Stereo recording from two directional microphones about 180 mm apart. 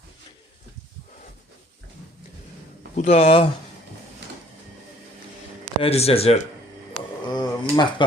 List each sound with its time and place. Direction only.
2.9 s speech: 35° left (ahead or behind)
5.8 s speech: 35° left (ahead or behind)